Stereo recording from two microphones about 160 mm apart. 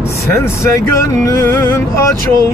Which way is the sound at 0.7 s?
15° left (ahead or behind).